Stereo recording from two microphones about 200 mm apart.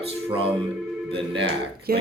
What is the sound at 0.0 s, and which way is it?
Speech, 30° right (ahead or behind).